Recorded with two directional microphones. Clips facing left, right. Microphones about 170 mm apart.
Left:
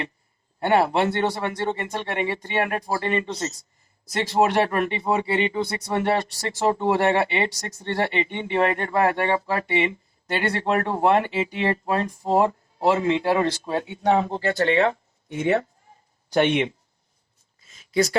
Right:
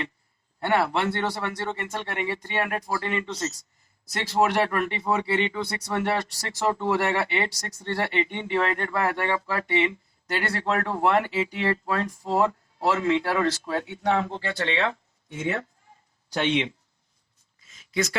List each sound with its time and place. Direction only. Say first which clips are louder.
0.6 s speech: left 4 dB; 25° left (ahead or behind); by 14.9 s 45° left (ahead or behind)
15.3 s speech: left 6 dB; 70° left (ahead or behind)
16.3 s speech: left 5 dB; 55° left (ahead or behind)
17.7 s a sound: left 5 dB; 35° left (ahead or behind)